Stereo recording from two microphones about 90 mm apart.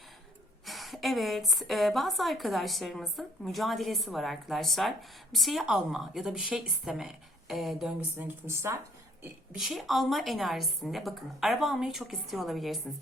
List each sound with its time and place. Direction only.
0.6 s a woman's voice: centre (ahead or behind)
8.2 s speech: 30° right (ahead or behind)
9.6 s a woman's voice: centre (ahead or behind)